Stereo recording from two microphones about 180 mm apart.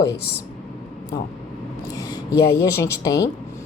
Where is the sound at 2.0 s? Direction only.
20° left (ahead or behind).